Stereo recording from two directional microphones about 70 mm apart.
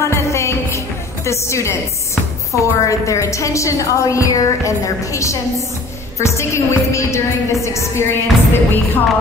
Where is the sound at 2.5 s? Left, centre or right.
Left.